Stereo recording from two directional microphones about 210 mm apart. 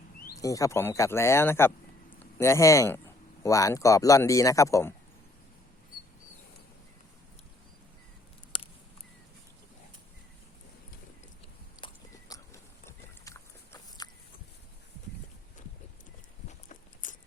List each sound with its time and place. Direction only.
0.3 s speech: 15° left (ahead or behind)
11.8 s a sound: 20° left (ahead or behind)
16.5 s walk: 35° left (ahead or behind)